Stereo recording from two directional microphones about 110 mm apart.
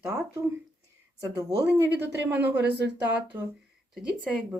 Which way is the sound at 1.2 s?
35° right (ahead or behind).